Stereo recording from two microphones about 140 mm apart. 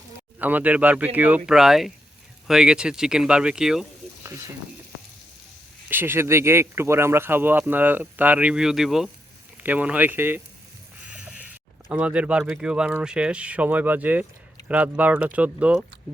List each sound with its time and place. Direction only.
0.3 s speech: 10° right (ahead or behind)
4.2 s mechanisms: 20° right (ahead or behind)
5.9 s speech: 15° right (ahead or behind)